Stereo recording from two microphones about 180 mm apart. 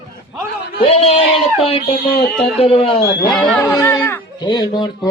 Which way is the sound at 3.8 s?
15° left (ahead or behind).